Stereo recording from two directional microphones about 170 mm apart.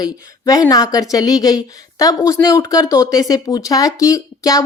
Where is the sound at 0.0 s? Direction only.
20° left (ahead or behind).